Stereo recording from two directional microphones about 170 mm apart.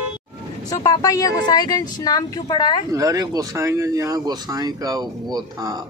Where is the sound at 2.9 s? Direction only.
20° right (ahead or behind).